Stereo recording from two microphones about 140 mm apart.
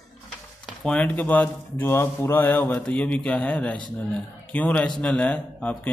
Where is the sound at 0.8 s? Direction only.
10° left (ahead or behind).